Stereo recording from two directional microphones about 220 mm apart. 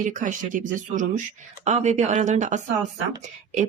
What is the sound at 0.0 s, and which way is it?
Speech, 35° right (ahead or behind).